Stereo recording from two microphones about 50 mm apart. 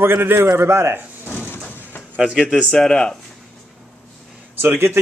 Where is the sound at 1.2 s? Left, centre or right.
Left.